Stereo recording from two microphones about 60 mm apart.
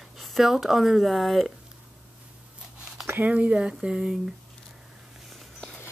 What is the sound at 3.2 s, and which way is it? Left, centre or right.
Speech, right.